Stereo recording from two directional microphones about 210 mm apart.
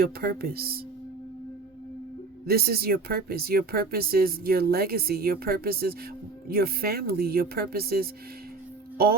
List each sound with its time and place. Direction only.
0.0 s speech: 45° right (ahead or behind)
2.5 s speech: 50° right (ahead or behind)